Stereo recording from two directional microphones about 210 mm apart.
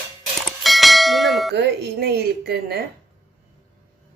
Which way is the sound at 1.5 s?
50° right (ahead or behind).